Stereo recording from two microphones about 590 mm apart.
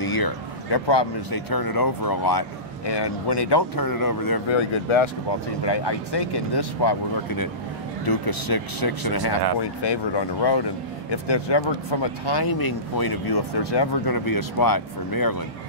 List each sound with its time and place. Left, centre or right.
0.0 s speech: left
4.5 s speech: left